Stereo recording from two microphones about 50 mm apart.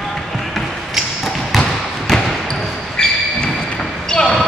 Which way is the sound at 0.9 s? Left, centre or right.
Centre.